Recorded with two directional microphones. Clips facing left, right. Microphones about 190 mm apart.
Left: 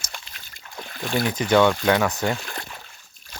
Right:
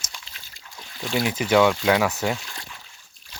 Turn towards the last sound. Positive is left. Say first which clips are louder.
# left 4 dB
turn(degrees=50)  # may be behind; listen again after turning